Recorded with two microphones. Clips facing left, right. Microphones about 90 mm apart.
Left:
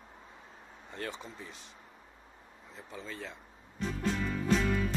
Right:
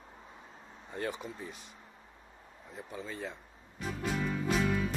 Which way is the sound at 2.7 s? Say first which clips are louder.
Right 2 dB; 15° right (ahead or behind).